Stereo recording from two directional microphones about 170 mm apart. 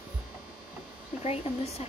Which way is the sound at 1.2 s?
35° left (ahead or behind).